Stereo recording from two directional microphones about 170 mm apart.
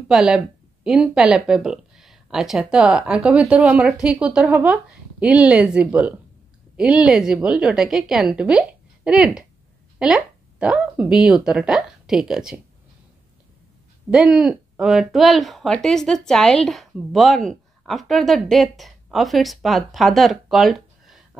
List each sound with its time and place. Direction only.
0.1 s speech: 5° right (ahead or behind)
14.1 s speech: 5° right (ahead or behind)